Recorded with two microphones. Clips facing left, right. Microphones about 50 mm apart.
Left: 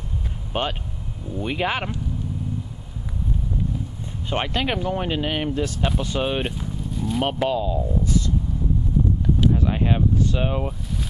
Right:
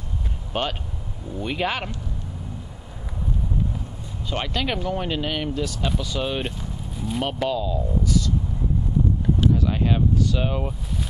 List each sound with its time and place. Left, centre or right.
0.5 s speech: centre
4.3 s speech: left
6.9 s vehicle: centre
7.4 s speech: left
9.5 s a sound: left
10.1 s speech: left